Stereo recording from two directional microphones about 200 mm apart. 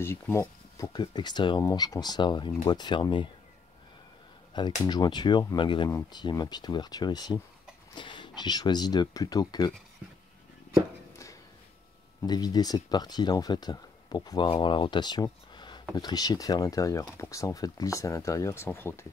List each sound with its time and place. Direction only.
0.0 s speech: 15° left (ahead or behind)
4.6 s speech: 20° left (ahead or behind)
12.2 s speech: 20° left (ahead or behind)